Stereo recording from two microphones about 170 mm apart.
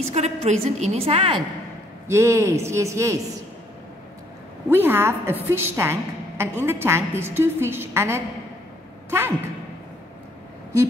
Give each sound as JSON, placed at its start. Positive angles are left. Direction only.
{"t": 0.1, "sound": "a woman's voice", "side_deg": -40}
{"t": 2.0, "sound": "a woman's voice", "side_deg": -15}
{"t": 4.6, "sound": "a woman's voice", "side_deg": -10}